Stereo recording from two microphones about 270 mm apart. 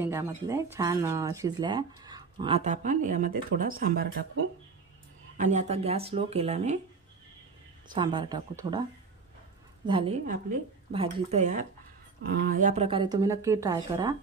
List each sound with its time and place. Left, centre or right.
0.0 s speech: centre; by 4.1 s right
5.4 s speech: right
7.9 s speech: centre
9.8 s speech: centre
10.2 s speech: right; by 13.7 s centre